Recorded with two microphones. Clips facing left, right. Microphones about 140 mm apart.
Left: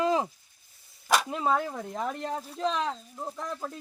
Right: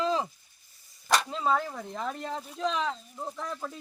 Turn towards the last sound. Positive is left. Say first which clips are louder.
# left 1 dB
turn(degrees=10)  # may be behind; listen again after turning